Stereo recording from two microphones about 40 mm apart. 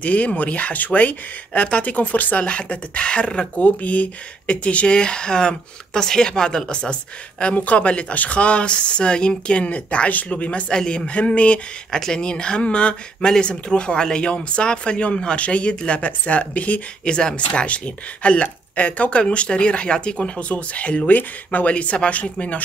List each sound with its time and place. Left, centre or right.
0.0 s speech: left
3.5 s speech: left
10.7 s speech: centre
11.1 s speech: left
11.9 s speech: centre; by 16.8 s left
17.0 s speech: left
17.6 s speech: left
21.1 s speech: left
21.6 s speech: left